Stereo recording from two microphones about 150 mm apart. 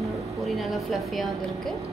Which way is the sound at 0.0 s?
Centre (ahead or behind).